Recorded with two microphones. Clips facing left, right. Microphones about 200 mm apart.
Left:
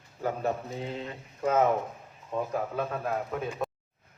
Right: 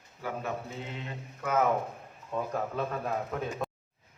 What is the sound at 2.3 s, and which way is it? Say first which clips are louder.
Speech: left 2 dB; 15° left (ahead or behind).